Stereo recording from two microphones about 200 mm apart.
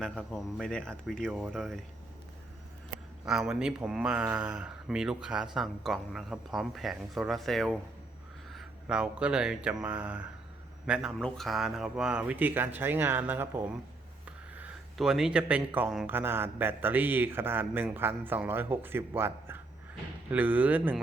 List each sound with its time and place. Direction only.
0.0 s speech: 5° left (ahead or behind)
3.2 s speech: centre (ahead or behind)